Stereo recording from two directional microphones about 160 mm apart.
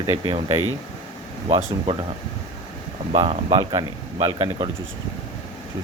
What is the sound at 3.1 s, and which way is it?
Speech, 35° right (ahead or behind).